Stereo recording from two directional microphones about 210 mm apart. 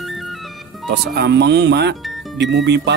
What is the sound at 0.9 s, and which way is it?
Speech, 55° right (ahead or behind).